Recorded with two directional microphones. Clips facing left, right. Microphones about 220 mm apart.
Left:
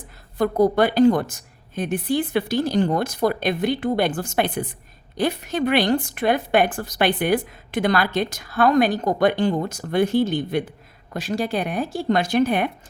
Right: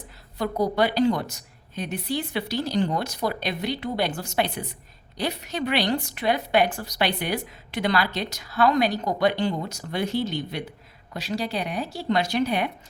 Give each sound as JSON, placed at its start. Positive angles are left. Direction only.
{"t": 0.3, "sound": "a woman's voice", "side_deg": 50}